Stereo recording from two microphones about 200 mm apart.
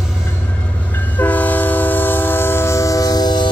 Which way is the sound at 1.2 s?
10° left (ahead or behind).